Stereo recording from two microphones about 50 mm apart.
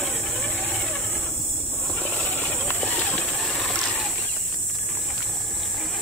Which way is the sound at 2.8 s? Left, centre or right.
Left.